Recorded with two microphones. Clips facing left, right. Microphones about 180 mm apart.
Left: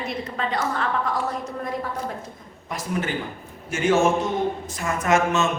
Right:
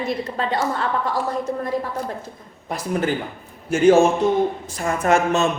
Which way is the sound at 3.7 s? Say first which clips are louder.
Right 5 dB; 30° right (ahead or behind).